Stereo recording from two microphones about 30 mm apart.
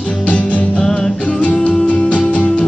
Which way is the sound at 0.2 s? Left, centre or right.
Left.